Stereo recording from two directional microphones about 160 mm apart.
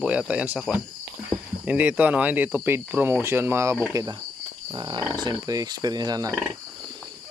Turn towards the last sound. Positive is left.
turn(degrees=-25)  # may be behind; listen again after turning